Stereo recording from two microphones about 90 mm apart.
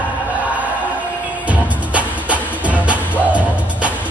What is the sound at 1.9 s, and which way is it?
Music, 15° right (ahead or behind).